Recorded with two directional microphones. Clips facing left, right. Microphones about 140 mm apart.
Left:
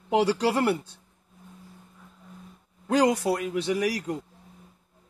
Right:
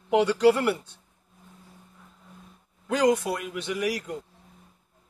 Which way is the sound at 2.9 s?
35° left (ahead or behind).